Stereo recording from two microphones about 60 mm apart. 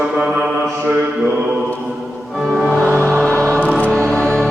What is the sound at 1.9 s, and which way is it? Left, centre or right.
Music, centre.